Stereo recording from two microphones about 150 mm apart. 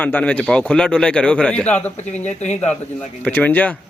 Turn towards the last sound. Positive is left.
turn(degrees=10)  # may be behind; listen again after turning